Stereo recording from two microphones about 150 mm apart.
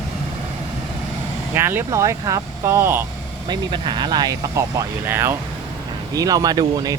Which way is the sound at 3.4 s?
30° right (ahead or behind).